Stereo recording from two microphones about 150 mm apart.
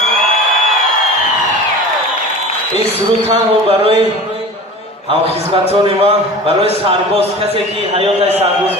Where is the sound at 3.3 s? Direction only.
40° right (ahead or behind).